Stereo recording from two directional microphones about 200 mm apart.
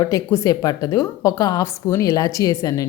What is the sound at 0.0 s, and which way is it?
Speech, 15° left (ahead or behind).